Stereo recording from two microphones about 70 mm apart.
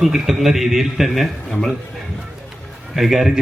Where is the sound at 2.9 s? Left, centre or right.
Centre.